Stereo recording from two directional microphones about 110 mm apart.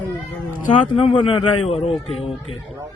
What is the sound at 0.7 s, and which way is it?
A man's voice, 50° left (ahead or behind).